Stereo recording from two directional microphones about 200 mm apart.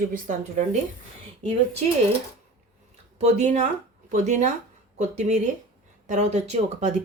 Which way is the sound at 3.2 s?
35° right (ahead or behind).